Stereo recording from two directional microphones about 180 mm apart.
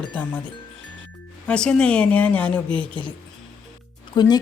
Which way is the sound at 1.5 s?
5° left (ahead or behind).